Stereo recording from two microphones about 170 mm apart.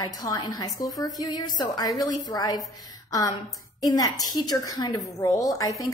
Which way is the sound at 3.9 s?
20° left (ahead or behind).